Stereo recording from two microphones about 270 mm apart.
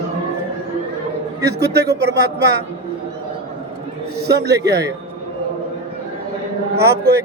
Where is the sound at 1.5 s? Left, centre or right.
Right.